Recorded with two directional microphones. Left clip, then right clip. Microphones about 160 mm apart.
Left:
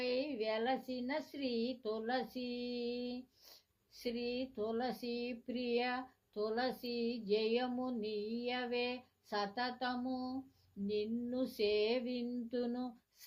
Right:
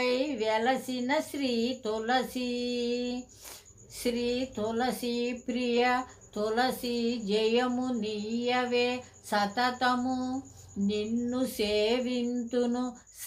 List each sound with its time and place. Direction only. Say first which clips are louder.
0.0 s speech: right 9 dB; 30° left (ahead or behind)
10.8 s female singing: right 7 dB; 30° left (ahead or behind)